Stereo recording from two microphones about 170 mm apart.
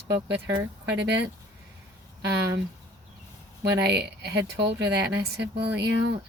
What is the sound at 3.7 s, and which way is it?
Speech, 80° right.